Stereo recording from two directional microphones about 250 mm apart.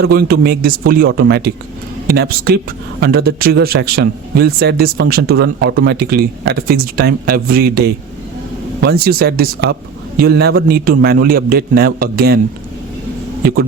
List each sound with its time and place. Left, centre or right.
0.0 s a man's voice: right
13.4 s a man's voice: right